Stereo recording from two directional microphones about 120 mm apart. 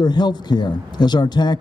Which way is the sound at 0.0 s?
35° left (ahead or behind).